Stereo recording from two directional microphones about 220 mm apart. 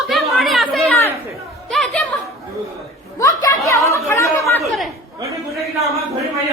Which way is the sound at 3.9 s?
15° left (ahead or behind).